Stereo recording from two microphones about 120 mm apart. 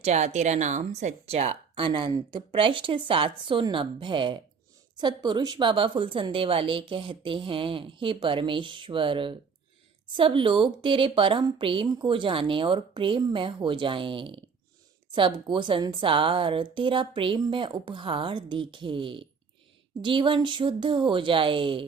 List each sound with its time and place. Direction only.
0.0 s a woman's voice: 70° right (ahead or behind); by 21.8 s 45° right (ahead or behind)